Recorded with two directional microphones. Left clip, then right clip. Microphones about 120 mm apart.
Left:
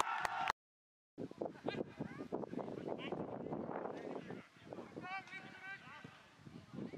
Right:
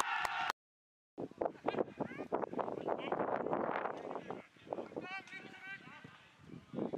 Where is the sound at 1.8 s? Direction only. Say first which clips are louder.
Right 7 dB; 45° right (ahead or behind).